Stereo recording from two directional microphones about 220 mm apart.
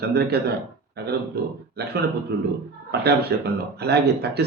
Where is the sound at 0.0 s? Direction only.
45° right (ahead or behind).